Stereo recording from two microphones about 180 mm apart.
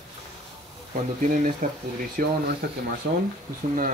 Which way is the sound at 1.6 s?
45° right (ahead or behind).